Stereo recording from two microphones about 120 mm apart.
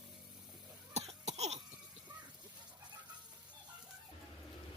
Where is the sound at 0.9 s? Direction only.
65° right (ahead or behind).